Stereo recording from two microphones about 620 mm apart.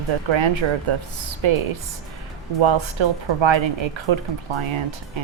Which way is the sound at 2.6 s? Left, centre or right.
Right.